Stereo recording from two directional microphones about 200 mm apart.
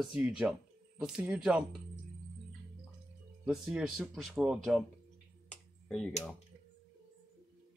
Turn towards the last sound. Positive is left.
turn(degrees=5)  # may be behind; listen again after turning